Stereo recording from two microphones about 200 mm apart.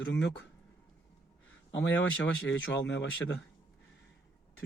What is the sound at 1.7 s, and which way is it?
Speech, 70° left (ahead or behind).